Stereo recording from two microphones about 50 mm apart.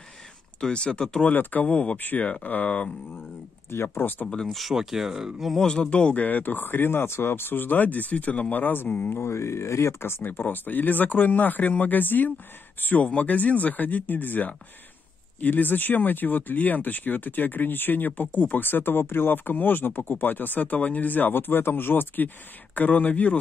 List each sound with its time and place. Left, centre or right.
0.6 s speech: centre
1.3 s speech: left
2.0 s speech: left
3.7 s speech: left
4.5 s speech: centre
5.5 s speech: centre; by 9.1 s left
9.1 s speech: left